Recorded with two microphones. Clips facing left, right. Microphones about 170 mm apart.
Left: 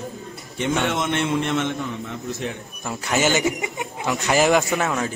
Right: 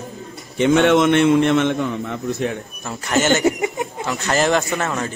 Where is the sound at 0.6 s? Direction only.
70° right (ahead or behind).